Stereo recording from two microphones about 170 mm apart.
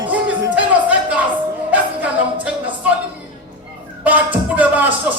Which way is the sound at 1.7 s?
10° right (ahead or behind).